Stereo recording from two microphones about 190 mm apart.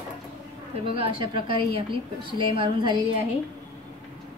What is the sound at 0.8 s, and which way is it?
A woman's voice, 30° right (ahead or behind).